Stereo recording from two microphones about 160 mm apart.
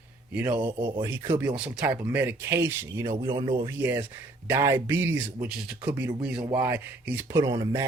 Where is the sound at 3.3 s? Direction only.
30° right (ahead or behind).